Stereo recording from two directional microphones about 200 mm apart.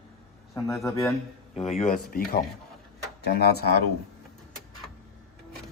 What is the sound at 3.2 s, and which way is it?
Speech, 55° left (ahead or behind).